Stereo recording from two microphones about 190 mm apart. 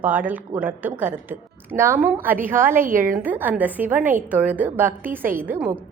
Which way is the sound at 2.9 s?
45° right (ahead or behind).